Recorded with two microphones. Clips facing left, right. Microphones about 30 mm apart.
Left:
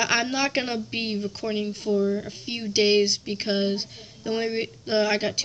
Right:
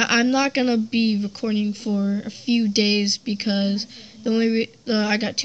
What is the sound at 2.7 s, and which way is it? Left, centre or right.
Speech, right.